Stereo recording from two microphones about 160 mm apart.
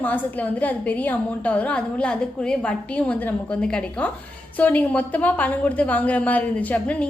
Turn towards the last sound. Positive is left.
turn(degrees=10)  # may be behind; listen again after turning